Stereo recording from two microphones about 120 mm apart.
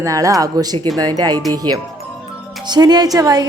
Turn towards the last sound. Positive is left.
turn(degrees=-30)  # may be behind; listen again after turning